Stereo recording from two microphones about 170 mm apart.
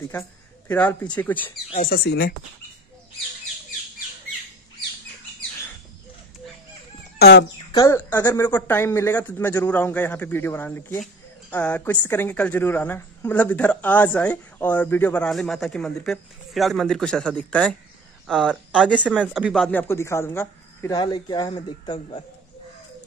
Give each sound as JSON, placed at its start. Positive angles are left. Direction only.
{"t": 0.7, "sound": "speech", "side_deg": 10}
{"t": 1.8, "sound": "speech", "side_deg": 65}
{"t": 7.2, "sound": "speech", "side_deg": 75}
{"t": 7.7, "sound": "speech", "side_deg": 20}
{"t": 18.9, "sound": "speech", "side_deg": -5}
{"t": 20.9, "sound": "speech", "side_deg": 25}